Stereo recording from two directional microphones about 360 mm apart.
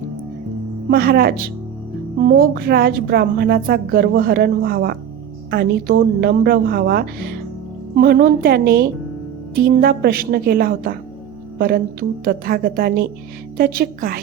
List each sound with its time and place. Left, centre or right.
0.9 s a woman's voice: right